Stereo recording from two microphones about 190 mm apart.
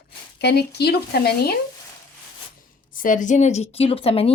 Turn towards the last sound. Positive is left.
turn(degrees=30)  # may be behind; listen again after turning